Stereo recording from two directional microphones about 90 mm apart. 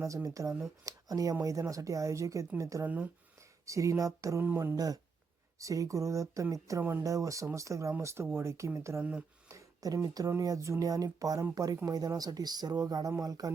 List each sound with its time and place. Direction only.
0.0 s speech: 35° right (ahead or behind)
2.8 s speech: 20° right (ahead or behind)
3.7 s speech: 35° right (ahead or behind)